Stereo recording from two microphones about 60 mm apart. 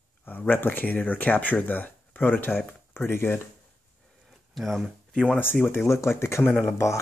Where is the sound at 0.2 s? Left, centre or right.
Left.